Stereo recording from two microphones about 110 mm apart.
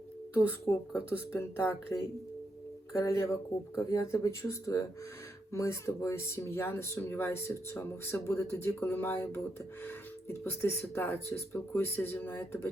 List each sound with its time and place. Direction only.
0.3 s speech: 25° left (ahead or behind)
3.0 s speech: 25° left (ahead or behind)